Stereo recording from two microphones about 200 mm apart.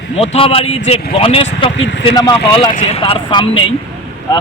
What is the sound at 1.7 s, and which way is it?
Speech, 65° left (ahead or behind).